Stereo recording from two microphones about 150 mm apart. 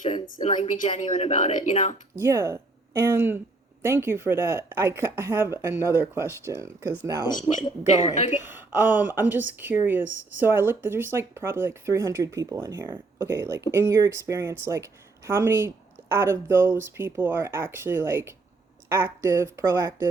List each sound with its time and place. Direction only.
0.4 s a woman's voice: 50° left (ahead or behind)
2.1 s speech: 20° right (ahead or behind)
7.5 s speech: 35° left (ahead or behind)
8.1 s a woman's voice: 50° left (ahead or behind)
8.7 s speech: 10° right (ahead or behind)